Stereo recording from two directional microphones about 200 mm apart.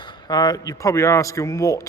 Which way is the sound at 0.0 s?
20° left (ahead or behind).